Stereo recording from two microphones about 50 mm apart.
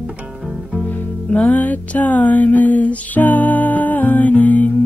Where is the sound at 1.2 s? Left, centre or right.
Left.